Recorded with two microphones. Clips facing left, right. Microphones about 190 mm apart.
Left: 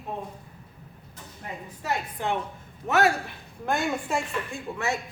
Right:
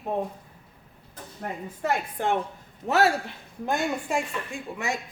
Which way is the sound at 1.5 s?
55° right (ahead or behind).